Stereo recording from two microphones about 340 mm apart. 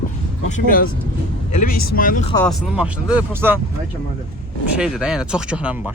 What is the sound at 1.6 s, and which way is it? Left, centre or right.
Speech, left.